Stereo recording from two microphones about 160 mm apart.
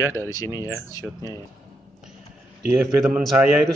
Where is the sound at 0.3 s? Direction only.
20° left (ahead or behind).